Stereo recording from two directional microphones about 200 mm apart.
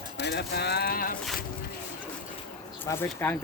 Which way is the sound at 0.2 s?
55° left (ahead or behind).